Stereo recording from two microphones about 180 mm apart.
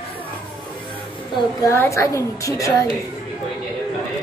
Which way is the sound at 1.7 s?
15° left (ahead or behind).